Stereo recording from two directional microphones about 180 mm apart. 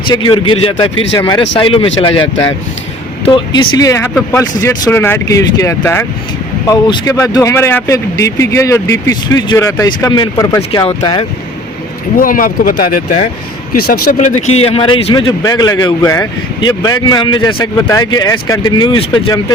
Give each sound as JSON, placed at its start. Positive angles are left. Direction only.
{"t": 0.1, "sound": "a man's voice", "side_deg": 25}
{"t": 3.2, "sound": "a man's voice", "side_deg": 25}
{"t": 12.1, "sound": "speech", "side_deg": 50}
{"t": 14.2, "sound": "a man's voice", "side_deg": 40}